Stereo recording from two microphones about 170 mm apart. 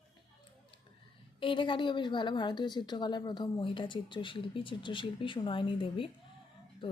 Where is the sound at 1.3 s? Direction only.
30° left (ahead or behind).